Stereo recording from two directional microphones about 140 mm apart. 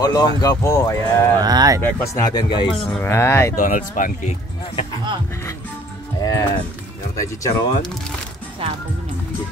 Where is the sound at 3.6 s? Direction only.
70° left (ahead or behind).